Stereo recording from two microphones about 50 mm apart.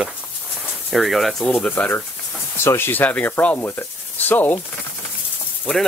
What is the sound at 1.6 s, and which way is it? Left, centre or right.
Speech, left.